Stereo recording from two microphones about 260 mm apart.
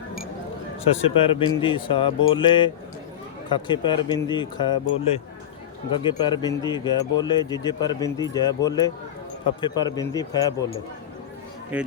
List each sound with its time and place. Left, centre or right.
1.0 s speech: left
6.0 s speech: centre
11.7 s speech: centre